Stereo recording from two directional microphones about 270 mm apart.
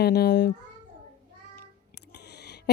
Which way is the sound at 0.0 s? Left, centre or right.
Left.